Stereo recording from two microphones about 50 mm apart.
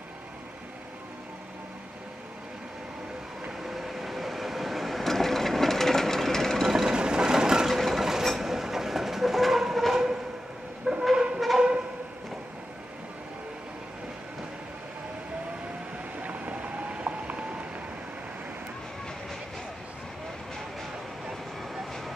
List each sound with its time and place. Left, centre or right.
3.6 s train: centre
6.7 s train: centre
16.2 s vehicle: right